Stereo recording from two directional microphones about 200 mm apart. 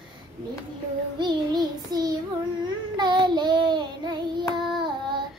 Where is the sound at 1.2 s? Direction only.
20° right (ahead or behind).